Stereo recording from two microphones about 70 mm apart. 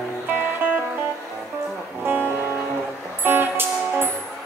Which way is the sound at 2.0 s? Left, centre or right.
Right.